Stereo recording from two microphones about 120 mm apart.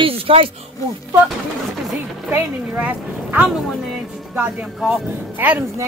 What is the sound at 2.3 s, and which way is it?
A woman's voice, 15° right (ahead or behind).